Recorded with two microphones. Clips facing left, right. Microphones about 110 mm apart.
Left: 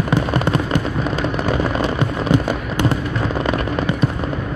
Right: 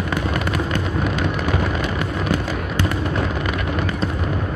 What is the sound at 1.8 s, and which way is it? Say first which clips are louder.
Fireworks: left 4 dB; 25° left (ahead or behind).